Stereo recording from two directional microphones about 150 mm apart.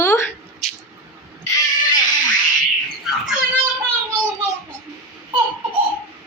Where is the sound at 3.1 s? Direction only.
Centre (ahead or behind).